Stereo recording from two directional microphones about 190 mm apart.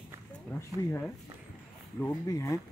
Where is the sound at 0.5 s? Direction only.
15° left (ahead or behind).